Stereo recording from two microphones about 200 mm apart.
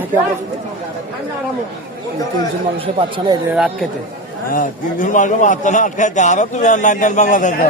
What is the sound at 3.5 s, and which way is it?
Speech, 5° right (ahead or behind).